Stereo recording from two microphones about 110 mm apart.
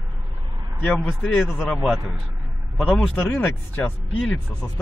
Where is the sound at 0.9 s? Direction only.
5° left (ahead or behind).